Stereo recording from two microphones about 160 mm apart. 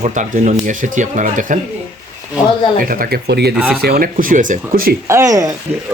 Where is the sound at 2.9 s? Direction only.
65° right (ahead or behind); by 3.5 s 90° right.